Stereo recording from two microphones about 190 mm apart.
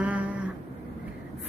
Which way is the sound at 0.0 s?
5° right (ahead or behind).